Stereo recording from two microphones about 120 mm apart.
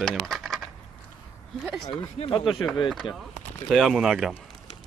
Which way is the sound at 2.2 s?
50° left (ahead or behind).